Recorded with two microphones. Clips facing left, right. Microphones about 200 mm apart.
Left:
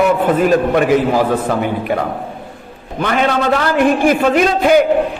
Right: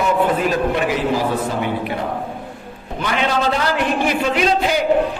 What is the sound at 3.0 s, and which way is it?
A man's voice, 55° left (ahead or behind).